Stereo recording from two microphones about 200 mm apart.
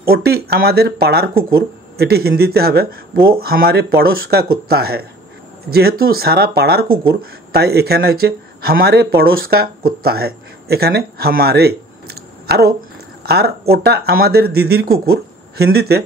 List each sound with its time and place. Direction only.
0.0 s speech: 50° right (ahead or behind)